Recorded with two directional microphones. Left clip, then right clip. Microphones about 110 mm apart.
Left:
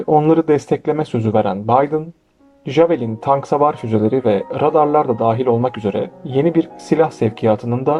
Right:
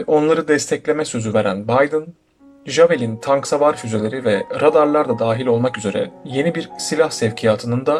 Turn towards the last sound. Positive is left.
turn(degrees=30)  # may be behind; listen again after turning